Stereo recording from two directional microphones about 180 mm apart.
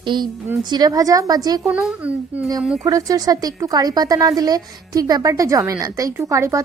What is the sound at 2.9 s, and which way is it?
A woman's voice, 20° right (ahead or behind).